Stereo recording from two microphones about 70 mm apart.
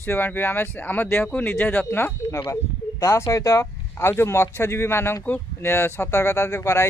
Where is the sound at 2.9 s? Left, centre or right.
Left.